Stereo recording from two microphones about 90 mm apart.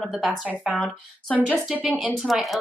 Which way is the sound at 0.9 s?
15° left (ahead or behind).